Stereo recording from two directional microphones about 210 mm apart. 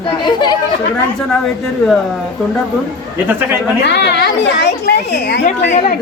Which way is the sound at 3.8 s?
55° left (ahead or behind).